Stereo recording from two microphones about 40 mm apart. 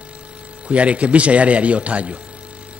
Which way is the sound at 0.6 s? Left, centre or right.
Right.